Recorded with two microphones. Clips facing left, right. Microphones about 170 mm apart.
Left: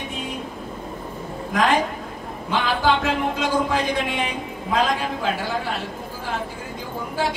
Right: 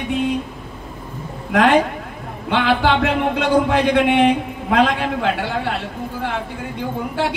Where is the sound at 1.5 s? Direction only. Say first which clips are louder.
Right 6 dB; 65° right (ahead or behind).